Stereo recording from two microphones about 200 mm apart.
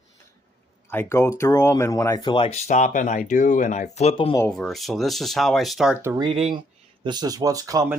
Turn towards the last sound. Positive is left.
turn(degrees=-15)  # may be behind; listen again after turning